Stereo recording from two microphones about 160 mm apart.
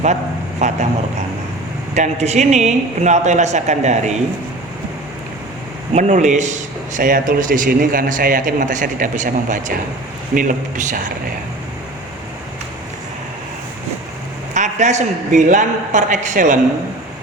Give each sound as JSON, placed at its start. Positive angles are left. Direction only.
{"t": 0.6, "sound": "speech", "side_deg": -45}
{"t": 2.0, "sound": "speech", "side_deg": -45}
{"t": 5.9, "sound": "speech", "side_deg": -45}
{"t": 14.5, "sound": "speech", "side_deg": -50}